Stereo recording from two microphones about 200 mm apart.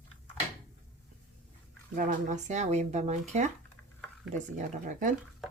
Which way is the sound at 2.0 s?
40° right (ahead or behind).